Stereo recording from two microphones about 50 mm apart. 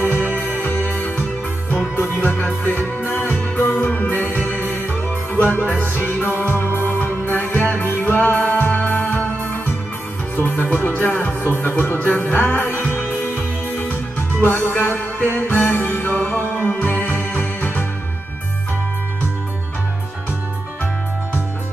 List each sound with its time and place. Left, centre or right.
0.2 s music: left